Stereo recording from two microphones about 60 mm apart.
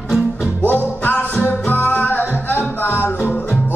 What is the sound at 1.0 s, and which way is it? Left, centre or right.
Music, left.